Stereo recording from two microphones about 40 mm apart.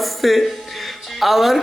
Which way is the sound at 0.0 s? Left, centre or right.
Centre.